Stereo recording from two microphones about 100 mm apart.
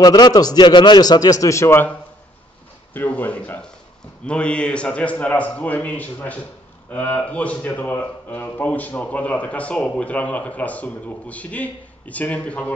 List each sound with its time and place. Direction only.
0.0 s a man's voice: 40° left (ahead or behind); by 1.9 s 25° left (ahead or behind)
2.9 s a man's voice: 15° left (ahead or behind)